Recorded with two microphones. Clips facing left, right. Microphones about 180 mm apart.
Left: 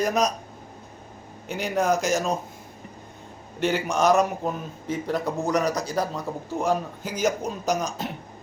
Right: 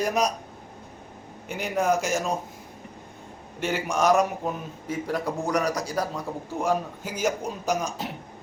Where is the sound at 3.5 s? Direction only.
5° right (ahead or behind).